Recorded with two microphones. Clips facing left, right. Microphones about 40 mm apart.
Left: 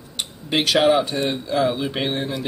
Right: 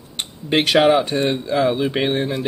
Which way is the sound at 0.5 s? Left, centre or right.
Right.